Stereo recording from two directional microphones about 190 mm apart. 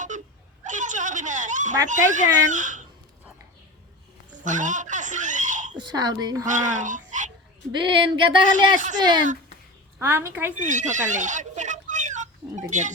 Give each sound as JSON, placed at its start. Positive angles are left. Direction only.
{"t": 0.6, "sound": "a sound", "side_deg": -40}
{"t": 1.9, "sound": "speech", "side_deg": -40}
{"t": 4.4, "sound": "baby laughter", "side_deg": -40}
{"t": 5.7, "sound": "speech", "side_deg": -20}
{"t": 6.4, "sound": "speech", "side_deg": -40}
{"t": 7.7, "sound": "speech", "side_deg": -25}
{"t": 8.5, "sound": "speech", "side_deg": -40}
{"t": 9.0, "sound": "a woman's voice", "side_deg": -20}
{"t": 10.6, "sound": "a sound", "side_deg": -40}